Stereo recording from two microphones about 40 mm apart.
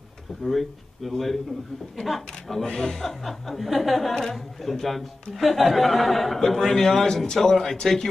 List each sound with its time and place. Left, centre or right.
0.4 s speech: centre
4.1 s speech: centre